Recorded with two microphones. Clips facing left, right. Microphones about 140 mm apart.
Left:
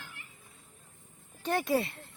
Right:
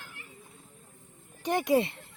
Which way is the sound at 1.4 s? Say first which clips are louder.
Right 4 dB; 15° right (ahead or behind).